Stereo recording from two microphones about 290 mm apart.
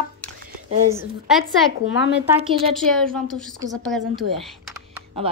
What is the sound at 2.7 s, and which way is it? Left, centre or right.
A woman's voice, centre.